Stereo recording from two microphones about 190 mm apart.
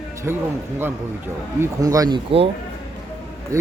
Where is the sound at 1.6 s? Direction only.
20° right (ahead or behind).